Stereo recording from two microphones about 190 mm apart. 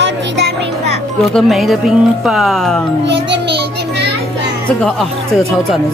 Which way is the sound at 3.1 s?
65° right (ahead or behind).